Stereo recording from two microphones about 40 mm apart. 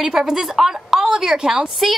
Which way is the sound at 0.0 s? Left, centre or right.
Centre.